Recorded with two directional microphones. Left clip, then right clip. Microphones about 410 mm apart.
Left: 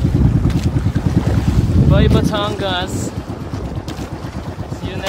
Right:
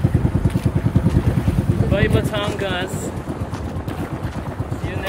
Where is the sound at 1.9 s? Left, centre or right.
Centre.